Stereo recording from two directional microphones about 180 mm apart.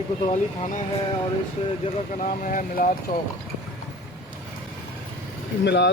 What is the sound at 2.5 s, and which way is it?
Speech, 50° left (ahead or behind).